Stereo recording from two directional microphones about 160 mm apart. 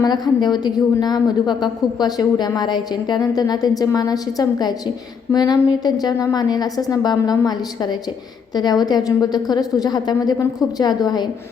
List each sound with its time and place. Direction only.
0.0 s a woman's voice: 25° left (ahead or behind)